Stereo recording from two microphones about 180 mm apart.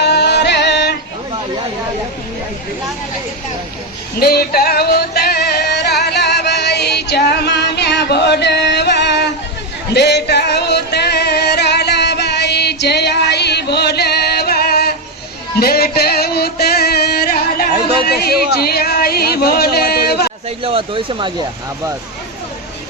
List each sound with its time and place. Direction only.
0.0 s music: 65° left (ahead or behind)
4.2 s music: 60° left (ahead or behind)
20.7 s speech: 30° right (ahead or behind)